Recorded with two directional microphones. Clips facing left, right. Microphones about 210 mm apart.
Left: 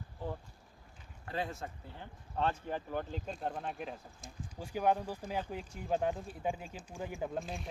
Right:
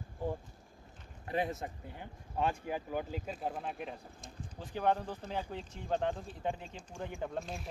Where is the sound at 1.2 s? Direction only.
20° right (ahead or behind).